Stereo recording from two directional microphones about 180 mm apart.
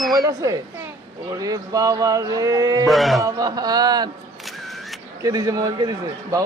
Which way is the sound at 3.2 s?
20° right (ahead or behind).